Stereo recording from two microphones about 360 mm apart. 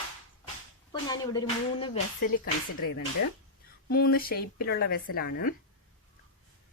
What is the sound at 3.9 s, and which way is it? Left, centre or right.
Speech, left.